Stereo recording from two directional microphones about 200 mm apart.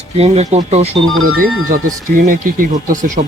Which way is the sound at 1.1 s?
90° right.